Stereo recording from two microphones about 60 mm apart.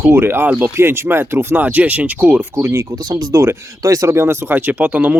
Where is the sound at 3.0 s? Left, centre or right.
Right.